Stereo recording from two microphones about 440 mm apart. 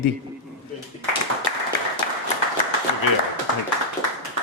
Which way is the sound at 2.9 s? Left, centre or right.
Left.